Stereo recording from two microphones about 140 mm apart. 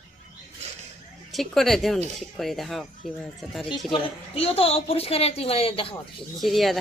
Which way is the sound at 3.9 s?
45° left (ahead or behind).